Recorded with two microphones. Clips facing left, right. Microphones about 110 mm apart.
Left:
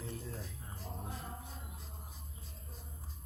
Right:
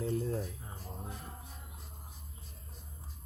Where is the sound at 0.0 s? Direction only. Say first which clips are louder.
Right 11 dB; 55° right (ahead or behind).